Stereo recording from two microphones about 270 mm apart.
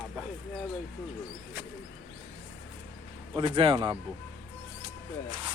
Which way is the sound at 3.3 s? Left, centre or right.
Centre.